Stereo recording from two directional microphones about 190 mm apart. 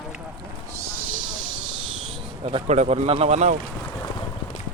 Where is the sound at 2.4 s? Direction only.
35° right (ahead or behind).